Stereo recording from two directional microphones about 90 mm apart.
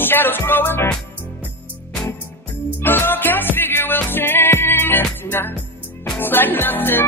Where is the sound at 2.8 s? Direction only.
25° left (ahead or behind).